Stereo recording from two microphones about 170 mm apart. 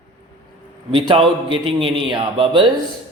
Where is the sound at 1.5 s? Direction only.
30° right (ahead or behind).